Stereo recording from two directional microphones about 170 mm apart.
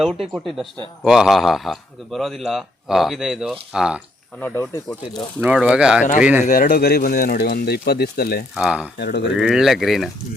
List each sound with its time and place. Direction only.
0.3 s a man's voice: centre (ahead or behind)
4.4 s speech: 10° left (ahead or behind)
5.4 s a man's voice: 5° right (ahead or behind)
6.4 s speech: 55° left (ahead or behind)
8.5 s a man's voice: 5° right (ahead or behind)
9.0 s speech: 85° left
9.4 s a man's voice: 5° right (ahead or behind)